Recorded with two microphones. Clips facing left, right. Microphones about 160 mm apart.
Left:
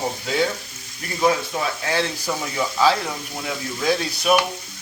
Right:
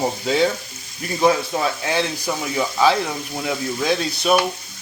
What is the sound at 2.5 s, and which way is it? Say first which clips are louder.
Speech: right 2 dB; 20° right (ahead or behind).